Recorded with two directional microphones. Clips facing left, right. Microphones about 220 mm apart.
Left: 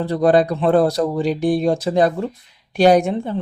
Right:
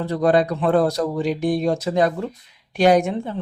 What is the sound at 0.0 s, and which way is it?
Speech, 35° left (ahead or behind).